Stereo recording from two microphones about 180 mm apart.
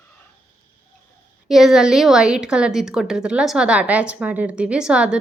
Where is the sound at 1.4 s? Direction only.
Centre (ahead or behind).